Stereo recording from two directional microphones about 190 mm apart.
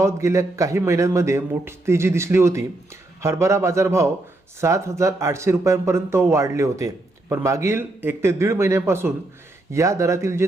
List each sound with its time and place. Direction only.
0.0 s speech: 15° right (ahead or behind)